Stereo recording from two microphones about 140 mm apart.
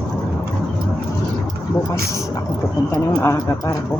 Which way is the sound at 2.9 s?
25° left (ahead or behind).